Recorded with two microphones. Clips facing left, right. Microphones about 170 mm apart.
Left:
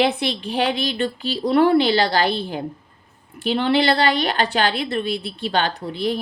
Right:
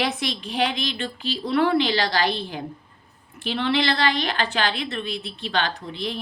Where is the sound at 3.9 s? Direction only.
35° left (ahead or behind).